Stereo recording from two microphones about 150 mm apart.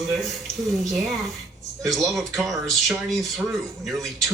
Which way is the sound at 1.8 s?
Centre (ahead or behind).